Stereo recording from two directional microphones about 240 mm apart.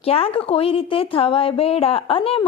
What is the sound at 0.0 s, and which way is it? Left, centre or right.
Speech, left.